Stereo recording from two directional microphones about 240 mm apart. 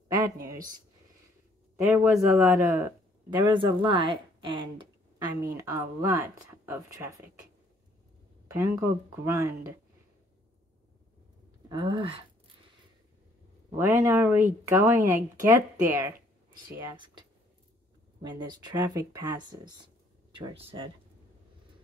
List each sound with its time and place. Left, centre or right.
0.1 s a sound: centre
1.8 s speech: centre
3.4 s speech: right
8.5 s speech: centre
11.7 s speech: right
13.7 s speech: centre
16.9 s speech: centre
18.2 s speech: centre